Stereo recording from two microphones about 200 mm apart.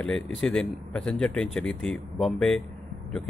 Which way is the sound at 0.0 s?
5° left (ahead or behind).